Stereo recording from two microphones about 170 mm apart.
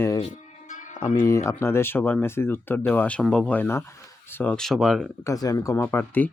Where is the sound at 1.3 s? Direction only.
15° left (ahead or behind); by 5.1 s centre (ahead or behind).